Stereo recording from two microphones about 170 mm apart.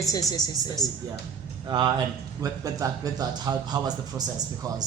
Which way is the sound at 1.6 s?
25° right (ahead or behind).